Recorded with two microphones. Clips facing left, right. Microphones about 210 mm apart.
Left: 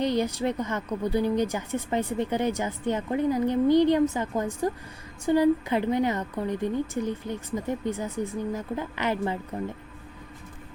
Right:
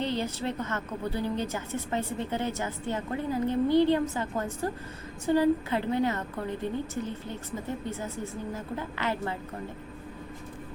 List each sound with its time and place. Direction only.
0.0 s a woman's voice: 15° left (ahead or behind)